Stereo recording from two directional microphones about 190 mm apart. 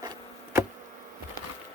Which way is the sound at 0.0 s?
20° right (ahead or behind).